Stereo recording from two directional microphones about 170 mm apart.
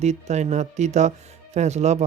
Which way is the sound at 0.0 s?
40° right (ahead or behind).